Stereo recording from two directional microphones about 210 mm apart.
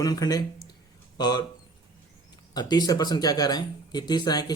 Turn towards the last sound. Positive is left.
turn(degrees=20)  # may be behind; listen again after turning